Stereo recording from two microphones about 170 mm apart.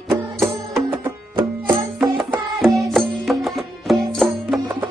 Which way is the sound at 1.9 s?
5° right (ahead or behind).